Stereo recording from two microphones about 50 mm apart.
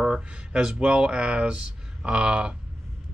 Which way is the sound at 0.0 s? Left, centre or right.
Right.